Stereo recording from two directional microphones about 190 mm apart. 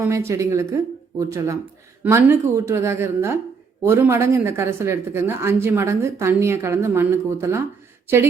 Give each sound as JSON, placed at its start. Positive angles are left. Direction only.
{"t": 0.0, "sound": "speech", "side_deg": -15}